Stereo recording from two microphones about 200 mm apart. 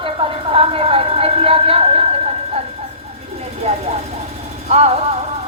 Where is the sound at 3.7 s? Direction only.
30° right (ahead or behind).